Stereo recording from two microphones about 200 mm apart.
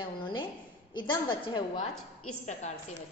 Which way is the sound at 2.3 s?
35° left (ahead or behind).